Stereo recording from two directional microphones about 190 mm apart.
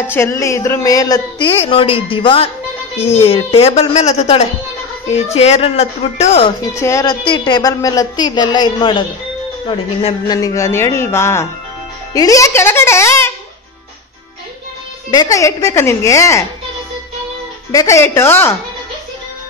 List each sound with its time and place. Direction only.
0.1 s a woman's voice: 15° left (ahead or behind); by 6.5 s 35° left (ahead or behind)
6.7 s a woman's voice: 15° left (ahead or behind)
15.0 s speech: 20° left (ahead or behind)
17.6 s speech: 15° left (ahead or behind)